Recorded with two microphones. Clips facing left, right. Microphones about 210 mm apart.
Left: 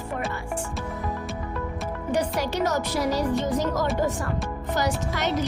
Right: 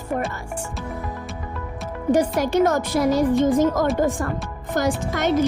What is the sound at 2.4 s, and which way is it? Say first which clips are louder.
Speech: right 6 dB; 50° right (ahead or behind).